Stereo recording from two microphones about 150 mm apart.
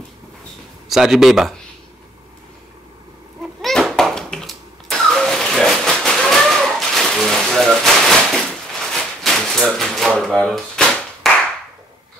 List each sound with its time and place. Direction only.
0.8 s speech: centre (ahead or behind)
3.6 s a sound: centre (ahead or behind)
11.3 s clapping: centre (ahead or behind)